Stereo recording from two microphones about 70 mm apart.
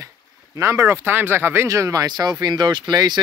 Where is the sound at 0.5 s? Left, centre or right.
Right.